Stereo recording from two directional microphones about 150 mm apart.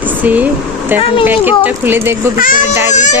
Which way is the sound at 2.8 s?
55° left (ahead or behind).